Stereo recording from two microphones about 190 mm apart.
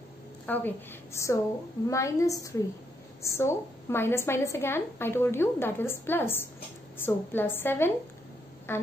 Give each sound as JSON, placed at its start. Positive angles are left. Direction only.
{"t": 0.5, "sound": "a woman's voice", "side_deg": 10}